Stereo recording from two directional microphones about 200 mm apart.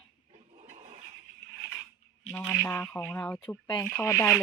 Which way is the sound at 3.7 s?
15° left (ahead or behind).